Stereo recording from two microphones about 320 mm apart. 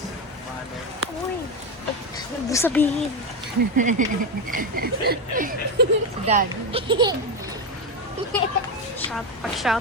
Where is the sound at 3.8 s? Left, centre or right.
Right.